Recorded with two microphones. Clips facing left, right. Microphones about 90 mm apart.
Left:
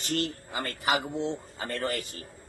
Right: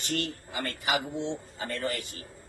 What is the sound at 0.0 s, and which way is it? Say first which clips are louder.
A man's voice: left 2 dB; 40° left (ahead or behind).